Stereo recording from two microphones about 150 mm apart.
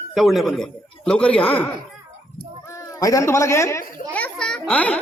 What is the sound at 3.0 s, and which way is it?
A child's voice, 20° left (ahead or behind).